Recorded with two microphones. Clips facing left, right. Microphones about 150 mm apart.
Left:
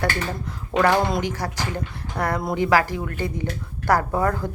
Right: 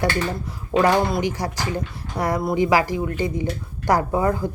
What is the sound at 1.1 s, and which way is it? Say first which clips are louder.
Speech: right 2 dB; 10° right (ahead or behind).